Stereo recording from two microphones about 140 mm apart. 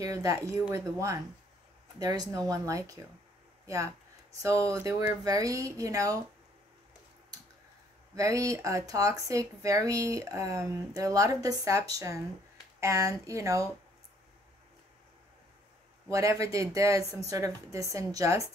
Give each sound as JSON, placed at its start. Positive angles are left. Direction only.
{"t": 0.0, "sound": "speech", "side_deg": -25}
{"t": 8.2, "sound": "speech", "side_deg": -25}
{"t": 16.1, "sound": "speech", "side_deg": -25}